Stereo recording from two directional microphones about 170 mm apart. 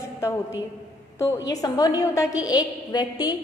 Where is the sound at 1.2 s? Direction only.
20° left (ahead or behind).